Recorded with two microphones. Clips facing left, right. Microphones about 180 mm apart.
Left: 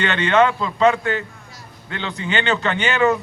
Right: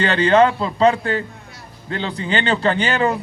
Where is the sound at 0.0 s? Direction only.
35° right (ahead or behind).